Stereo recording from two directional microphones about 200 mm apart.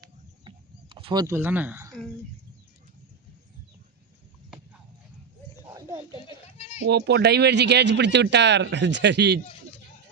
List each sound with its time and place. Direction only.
0.0 s bird: 25° right (ahead or behind)
1.4 s speech: 10° right (ahead or behind)
5.6 s a sound: 15° right (ahead or behind)
6.8 s speech: 55° right (ahead or behind)